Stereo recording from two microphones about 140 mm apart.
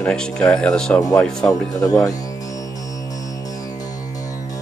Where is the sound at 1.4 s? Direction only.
25° left (ahead or behind).